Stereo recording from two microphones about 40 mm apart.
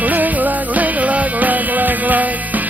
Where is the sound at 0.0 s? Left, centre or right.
Right.